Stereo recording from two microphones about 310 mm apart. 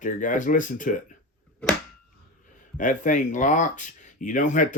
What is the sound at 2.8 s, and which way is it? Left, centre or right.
Speech, left.